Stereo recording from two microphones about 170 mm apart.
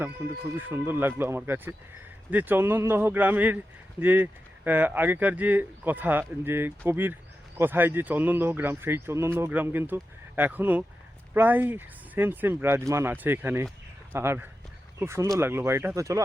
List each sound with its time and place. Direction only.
0.5 s speech: 10° right (ahead or behind)